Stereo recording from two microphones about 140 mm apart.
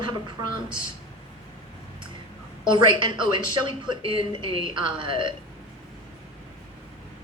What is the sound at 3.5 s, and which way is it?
Speech, 35° right (ahead or behind).